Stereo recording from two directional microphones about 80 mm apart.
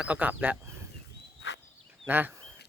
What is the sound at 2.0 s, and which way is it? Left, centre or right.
Speech, right.